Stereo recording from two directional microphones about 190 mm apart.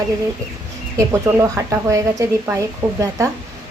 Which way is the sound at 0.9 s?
15° right (ahead or behind).